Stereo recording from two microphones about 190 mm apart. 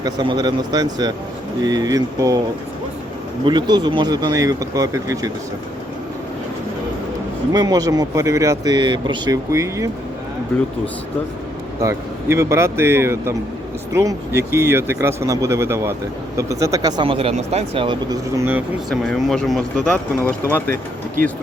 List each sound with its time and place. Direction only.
0.0 s speech: 20° right (ahead or behind)
3.4 s speech: 25° right (ahead or behind)
7.5 s speech: 20° right (ahead or behind)
11.8 s speech: 15° right (ahead or behind)
18.9 s speech: centre (ahead or behind)